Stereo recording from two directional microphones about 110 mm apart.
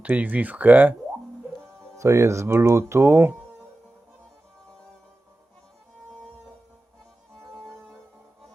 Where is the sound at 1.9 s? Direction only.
25° right (ahead or behind).